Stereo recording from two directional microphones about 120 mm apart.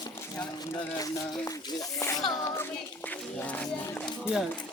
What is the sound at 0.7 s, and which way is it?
Speech, 30° left (ahead or behind).